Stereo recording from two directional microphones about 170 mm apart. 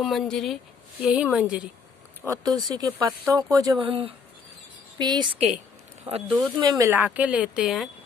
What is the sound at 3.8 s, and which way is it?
Speech, 35° right (ahead or behind).